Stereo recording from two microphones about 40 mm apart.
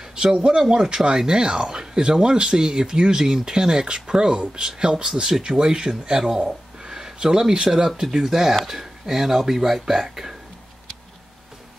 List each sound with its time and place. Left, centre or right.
0.1 s speech: centre